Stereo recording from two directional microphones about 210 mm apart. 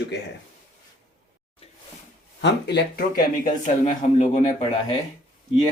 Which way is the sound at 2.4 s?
50° left (ahead or behind).